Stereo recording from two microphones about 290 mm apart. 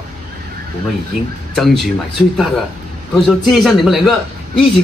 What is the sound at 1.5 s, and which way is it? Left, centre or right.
A man's voice, centre.